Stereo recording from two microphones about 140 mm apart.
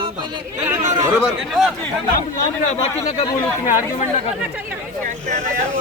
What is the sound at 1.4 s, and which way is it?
Speech, centre (ahead or behind).